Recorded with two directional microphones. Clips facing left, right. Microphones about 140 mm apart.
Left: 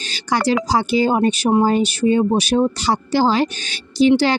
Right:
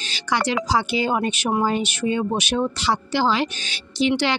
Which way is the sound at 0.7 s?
40° left (ahead or behind).